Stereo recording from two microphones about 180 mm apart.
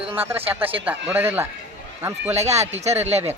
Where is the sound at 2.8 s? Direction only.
35° right (ahead or behind).